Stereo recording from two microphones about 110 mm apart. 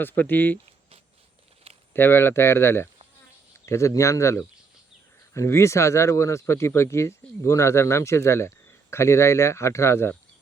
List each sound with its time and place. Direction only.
0.0 s speech: 15° left (ahead or behind)
1.9 s speech: 20° left (ahead or behind)